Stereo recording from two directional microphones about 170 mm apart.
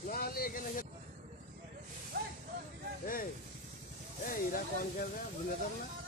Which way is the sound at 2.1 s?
65° right (ahead or behind).